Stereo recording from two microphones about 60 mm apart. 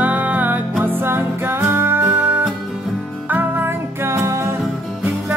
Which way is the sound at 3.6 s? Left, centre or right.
Right.